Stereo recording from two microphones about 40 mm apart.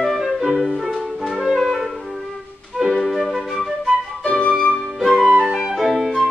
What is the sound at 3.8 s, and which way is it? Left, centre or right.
Flute, left.